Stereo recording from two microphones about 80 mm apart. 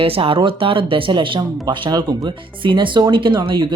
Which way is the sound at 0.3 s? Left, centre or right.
Right.